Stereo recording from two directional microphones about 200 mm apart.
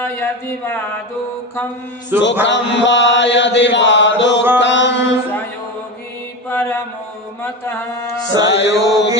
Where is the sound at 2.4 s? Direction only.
65° left (ahead or behind).